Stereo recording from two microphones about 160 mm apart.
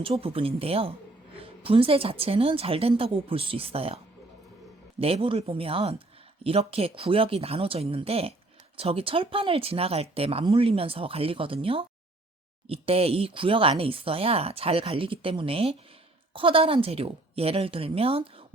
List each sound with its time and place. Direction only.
0.0 s speech: 35° right (ahead or behind)